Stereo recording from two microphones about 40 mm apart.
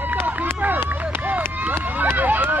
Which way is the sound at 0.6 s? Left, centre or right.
Right.